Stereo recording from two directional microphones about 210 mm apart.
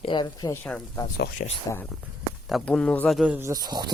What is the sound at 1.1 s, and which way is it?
Speech, 45° left (ahead or behind).